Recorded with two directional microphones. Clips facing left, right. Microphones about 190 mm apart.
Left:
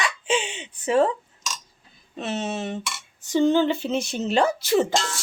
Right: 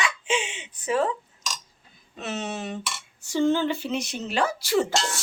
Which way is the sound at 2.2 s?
30° left (ahead or behind).